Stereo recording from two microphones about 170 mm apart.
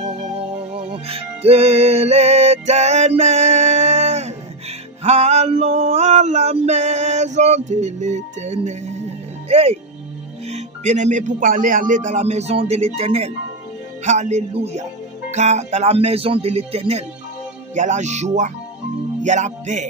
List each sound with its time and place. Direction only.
0.0 s music: 40° right (ahead or behind)
5.0 s male singing: 40° right (ahead or behind)
10.4 s speech: 40° right (ahead or behind)